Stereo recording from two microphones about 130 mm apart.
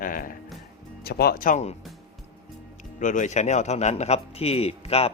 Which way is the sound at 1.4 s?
90° left.